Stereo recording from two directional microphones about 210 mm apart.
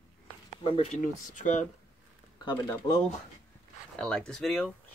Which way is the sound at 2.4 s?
20° left (ahead or behind).